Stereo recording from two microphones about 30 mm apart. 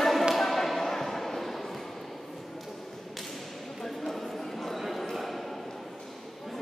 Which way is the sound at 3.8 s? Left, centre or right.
Centre.